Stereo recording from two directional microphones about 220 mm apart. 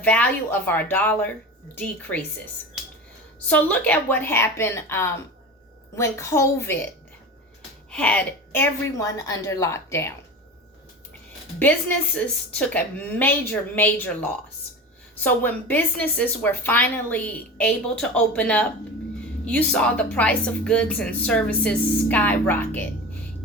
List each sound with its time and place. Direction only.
0.0 s a woman's voice: 5° left (ahead or behind)
3.4 s a woman's voice: 5° left (ahead or behind)
7.9 s a woman's voice: 5° left (ahead or behind)
12.1 s a woman's voice: 5° left (ahead or behind)